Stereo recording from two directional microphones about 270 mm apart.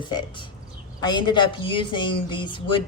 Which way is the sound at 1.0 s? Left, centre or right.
Centre.